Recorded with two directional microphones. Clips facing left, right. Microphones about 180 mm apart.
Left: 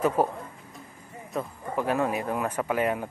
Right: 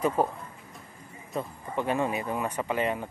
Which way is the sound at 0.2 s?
5° left (ahead or behind).